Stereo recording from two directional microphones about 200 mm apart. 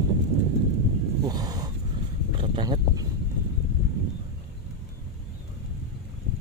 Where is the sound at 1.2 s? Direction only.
20° right (ahead or behind).